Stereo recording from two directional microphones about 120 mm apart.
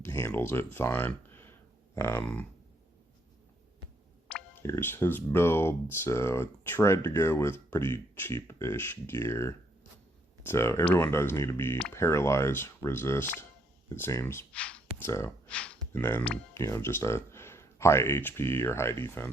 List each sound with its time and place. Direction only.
0.0 s a sound: 20° left (ahead or behind)
0.3 s speech: 20° left (ahead or behind)
4.3 s clicking: 10° left (ahead or behind)
4.6 s speech: 20° left (ahead or behind)
14.5 s speech: 10° left (ahead or behind)
14.9 s speech: 20° left (ahead or behind)
15.4 s a sound: 10° left (ahead or behind)
15.9 s speech: 20° left (ahead or behind)